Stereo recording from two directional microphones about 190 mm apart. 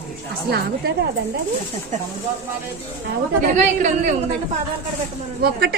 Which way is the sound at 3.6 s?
40° right (ahead or behind).